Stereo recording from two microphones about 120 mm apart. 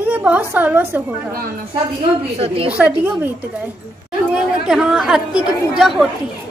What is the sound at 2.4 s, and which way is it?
Speech, 50° right (ahead or behind).